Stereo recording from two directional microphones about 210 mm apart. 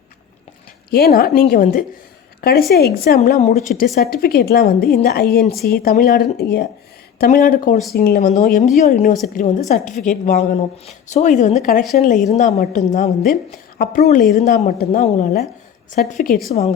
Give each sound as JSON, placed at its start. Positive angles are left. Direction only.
{"t": 0.9, "sound": "a woman's voice", "side_deg": 50}
{"t": 3.3, "sound": "a woman's voice", "side_deg": 35}
{"t": 3.9, "sound": "a woman's voice", "side_deg": 45}